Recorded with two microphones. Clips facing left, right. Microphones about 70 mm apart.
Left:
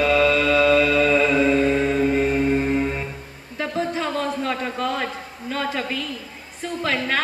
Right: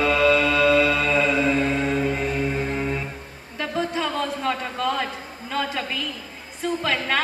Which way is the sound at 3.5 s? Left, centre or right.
Left.